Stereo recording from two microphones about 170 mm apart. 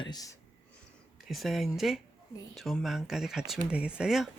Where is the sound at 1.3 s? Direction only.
Centre (ahead or behind).